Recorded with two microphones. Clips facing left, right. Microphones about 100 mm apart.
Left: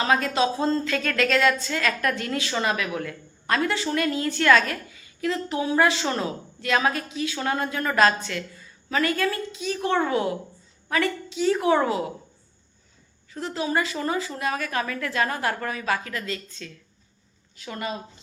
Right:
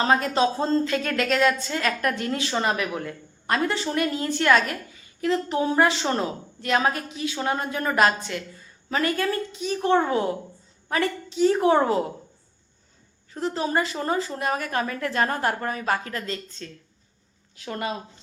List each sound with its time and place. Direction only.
0.0 s a woman's voice: 30° right (ahead or behind)
13.3 s a woman's voice: 30° right (ahead or behind)
17.7 s speech: 55° right (ahead or behind)